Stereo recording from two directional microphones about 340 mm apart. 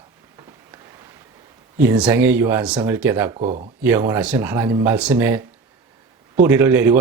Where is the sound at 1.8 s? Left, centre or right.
Centre.